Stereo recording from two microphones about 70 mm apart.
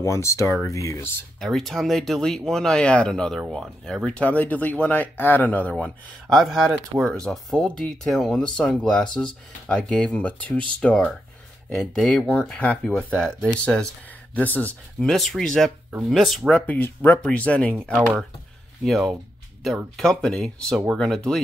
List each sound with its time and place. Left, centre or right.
0.0 s speech: left
1.4 s speech: centre
4.1 s speech: centre
6.2 s speech: centre
11.7 s speech: centre
12.4 s speech: centre
14.3 s speech: left
15.0 s speech: centre
16.5 s speech: left
18.9 s speech: centre